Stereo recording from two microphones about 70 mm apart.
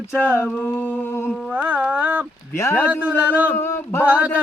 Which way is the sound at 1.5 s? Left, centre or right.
Centre.